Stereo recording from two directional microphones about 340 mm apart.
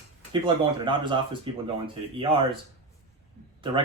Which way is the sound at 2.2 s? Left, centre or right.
Centre.